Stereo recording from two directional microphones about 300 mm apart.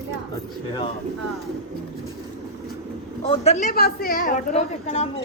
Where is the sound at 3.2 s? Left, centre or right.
Centre.